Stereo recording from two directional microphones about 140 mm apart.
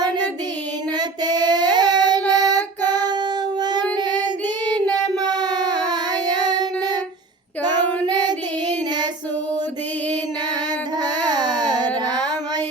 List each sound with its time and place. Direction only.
0.9 s child singing: 30° right (ahead or behind)
8.0 s child singing: 30° right (ahead or behind)
11.0 s a sound: 30° right (ahead or behind)
12.0 s child singing: 30° right (ahead or behind)